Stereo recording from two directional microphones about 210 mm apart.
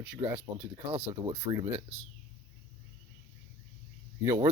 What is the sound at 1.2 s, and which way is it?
Speech, 15° right (ahead or behind).